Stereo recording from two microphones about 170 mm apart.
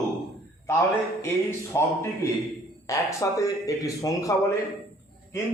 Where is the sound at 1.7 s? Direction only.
20° left (ahead or behind).